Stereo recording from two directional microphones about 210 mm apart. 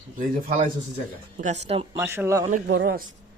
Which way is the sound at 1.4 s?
35° right (ahead or behind).